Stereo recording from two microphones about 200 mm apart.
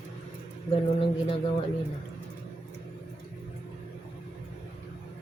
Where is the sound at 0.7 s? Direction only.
25° left (ahead or behind).